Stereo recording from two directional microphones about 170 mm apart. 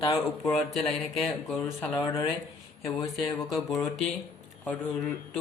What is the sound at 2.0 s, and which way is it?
Speech, 20° left (ahead or behind).